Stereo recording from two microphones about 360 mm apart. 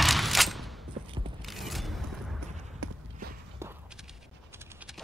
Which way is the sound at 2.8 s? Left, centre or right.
Right.